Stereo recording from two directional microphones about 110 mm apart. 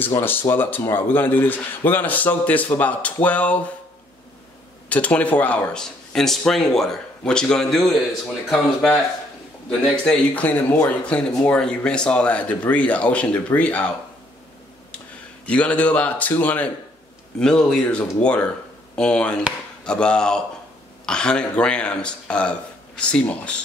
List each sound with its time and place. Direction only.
0.2 s a man's voice: 20° left (ahead or behind)
4.8 s a man's voice: 10° left (ahead or behind)
15.4 s a man's voice: 10° left (ahead or behind)